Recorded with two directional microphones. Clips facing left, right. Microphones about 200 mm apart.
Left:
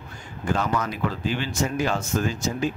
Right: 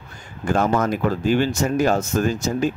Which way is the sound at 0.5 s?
50° right (ahead or behind).